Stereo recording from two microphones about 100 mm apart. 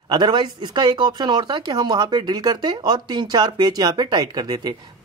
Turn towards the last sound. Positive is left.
turn(degrees=-45)  # may be behind; listen again after turning